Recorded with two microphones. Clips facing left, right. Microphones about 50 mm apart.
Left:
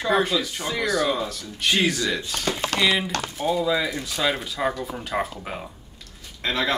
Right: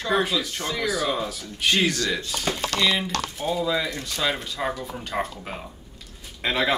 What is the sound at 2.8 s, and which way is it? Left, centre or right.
Speech, centre.